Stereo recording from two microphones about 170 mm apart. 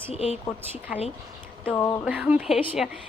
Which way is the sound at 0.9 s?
5° right (ahead or behind).